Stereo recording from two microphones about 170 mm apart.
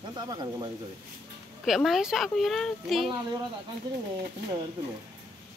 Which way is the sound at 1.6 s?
Centre (ahead or behind).